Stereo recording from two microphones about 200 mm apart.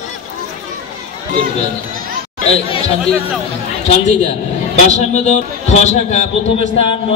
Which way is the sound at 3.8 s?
35° left (ahead or behind).